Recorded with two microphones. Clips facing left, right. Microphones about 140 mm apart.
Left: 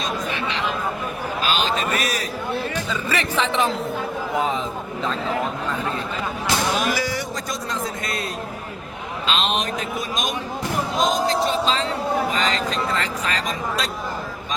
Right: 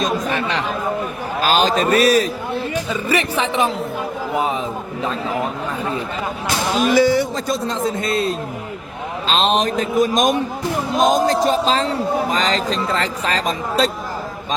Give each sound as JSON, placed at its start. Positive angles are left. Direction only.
{"t": 0.0, "sound": "chatter", "side_deg": -45}
{"t": 1.4, "sound": "a man's voice", "side_deg": -45}
{"t": 2.9, "sound": "a man's voice", "side_deg": -15}
{"t": 6.8, "sound": "a man's voice", "side_deg": -25}